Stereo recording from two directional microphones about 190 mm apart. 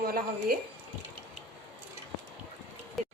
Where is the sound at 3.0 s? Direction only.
Centre (ahead or behind).